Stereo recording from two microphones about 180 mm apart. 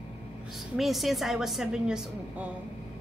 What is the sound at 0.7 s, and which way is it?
A woman's voice, centre (ahead or behind).